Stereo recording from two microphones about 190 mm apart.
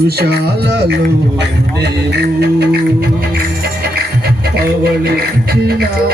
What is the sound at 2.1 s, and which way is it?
Music, 60° right (ahead or behind).